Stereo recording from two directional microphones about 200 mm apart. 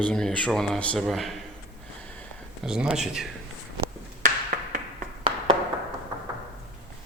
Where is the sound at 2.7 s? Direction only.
5° right (ahead or behind).